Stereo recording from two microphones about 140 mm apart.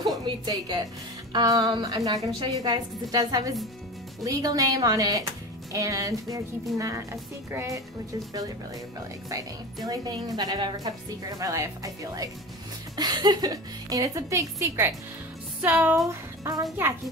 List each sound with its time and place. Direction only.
0.0 s a woman's voice: 30° right (ahead or behind)
9.8 s a woman's voice: 25° right (ahead or behind)